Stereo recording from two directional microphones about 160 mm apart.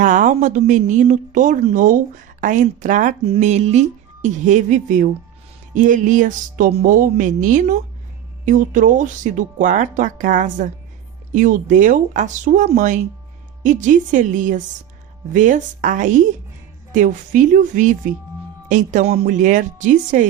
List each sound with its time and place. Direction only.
0.0 s speech: 55° right (ahead or behind)
3.3 s speech: 40° right (ahead or behind)
6.8 s speech: 60° right (ahead or behind)